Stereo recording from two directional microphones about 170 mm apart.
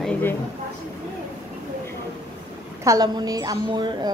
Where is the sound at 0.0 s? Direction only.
10° left (ahead or behind).